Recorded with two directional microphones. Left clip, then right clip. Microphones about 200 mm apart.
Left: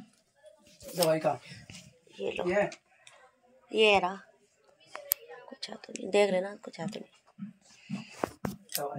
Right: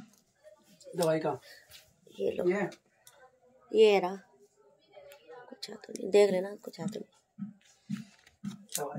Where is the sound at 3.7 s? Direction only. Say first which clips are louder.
Right 1 dB; 10° right (ahead or behind).